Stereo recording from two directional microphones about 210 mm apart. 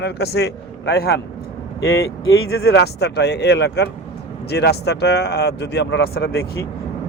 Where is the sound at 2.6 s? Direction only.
50° left (ahead or behind).